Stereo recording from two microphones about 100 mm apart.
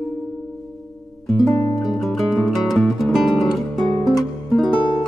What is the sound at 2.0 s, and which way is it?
Music, centre (ahead or behind).